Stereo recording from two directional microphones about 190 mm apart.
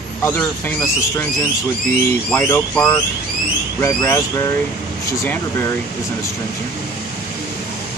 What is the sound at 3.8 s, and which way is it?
Speech, 15° left (ahead or behind).